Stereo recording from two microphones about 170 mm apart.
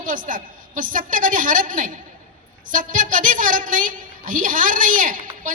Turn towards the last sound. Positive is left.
turn(degrees=-50)  # may be behind; listen again after turning